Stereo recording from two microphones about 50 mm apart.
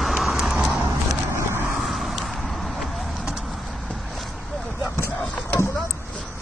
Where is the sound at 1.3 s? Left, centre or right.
Right.